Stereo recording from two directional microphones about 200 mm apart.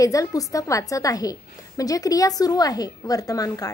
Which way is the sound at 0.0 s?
15° left (ahead or behind).